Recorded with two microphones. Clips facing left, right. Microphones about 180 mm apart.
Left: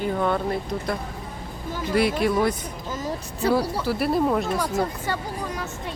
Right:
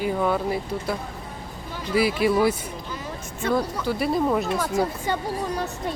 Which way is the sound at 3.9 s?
Centre (ahead or behind).